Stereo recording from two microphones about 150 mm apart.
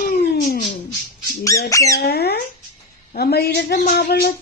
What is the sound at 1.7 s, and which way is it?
Squawk, 20° left (ahead or behind).